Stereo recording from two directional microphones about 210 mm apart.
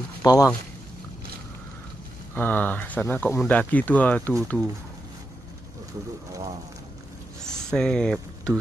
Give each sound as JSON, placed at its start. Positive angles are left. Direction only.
{"t": 0.2, "sound": "speech", "side_deg": 15}
{"t": 2.3, "sound": "speech", "side_deg": 10}
{"t": 7.4, "sound": "a sound", "side_deg": 5}